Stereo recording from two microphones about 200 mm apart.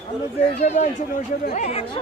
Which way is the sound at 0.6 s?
35° left (ahead or behind).